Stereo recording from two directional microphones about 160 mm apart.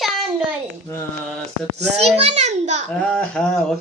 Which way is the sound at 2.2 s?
45° right (ahead or behind).